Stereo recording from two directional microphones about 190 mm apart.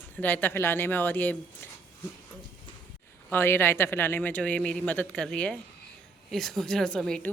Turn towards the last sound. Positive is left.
turn(degrees=5)  # may be behind; listen again after turning